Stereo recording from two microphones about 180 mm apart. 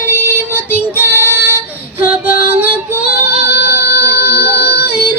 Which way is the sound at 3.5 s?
60° left (ahead or behind).